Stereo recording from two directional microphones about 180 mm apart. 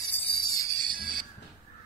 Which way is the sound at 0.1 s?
30° left (ahead or behind).